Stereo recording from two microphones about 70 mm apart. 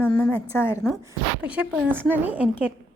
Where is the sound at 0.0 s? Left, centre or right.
Left.